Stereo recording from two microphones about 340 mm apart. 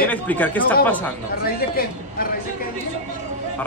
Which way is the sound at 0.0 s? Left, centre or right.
Centre.